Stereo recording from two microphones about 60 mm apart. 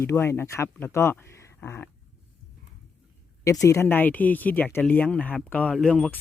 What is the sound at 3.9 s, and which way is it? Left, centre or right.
Speech, left.